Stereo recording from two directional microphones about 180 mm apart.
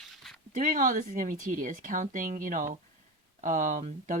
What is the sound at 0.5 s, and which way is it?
Speech, 50° right (ahead or behind).